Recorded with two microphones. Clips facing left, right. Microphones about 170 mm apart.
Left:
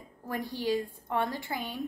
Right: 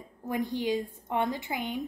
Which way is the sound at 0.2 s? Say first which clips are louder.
Right 4 dB; 20° right (ahead or behind).